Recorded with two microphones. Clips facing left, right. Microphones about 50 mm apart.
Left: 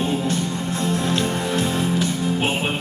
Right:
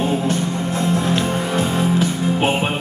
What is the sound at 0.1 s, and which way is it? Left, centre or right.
Music, right.